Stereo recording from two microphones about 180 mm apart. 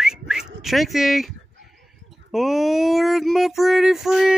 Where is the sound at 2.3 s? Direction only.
Centre (ahead or behind).